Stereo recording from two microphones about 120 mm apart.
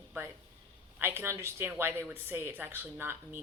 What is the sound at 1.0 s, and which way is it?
A woman's voice, 20° right (ahead or behind).